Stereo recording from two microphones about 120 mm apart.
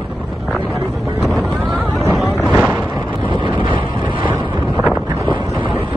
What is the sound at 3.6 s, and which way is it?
Vehicle, 45° right (ahead or behind).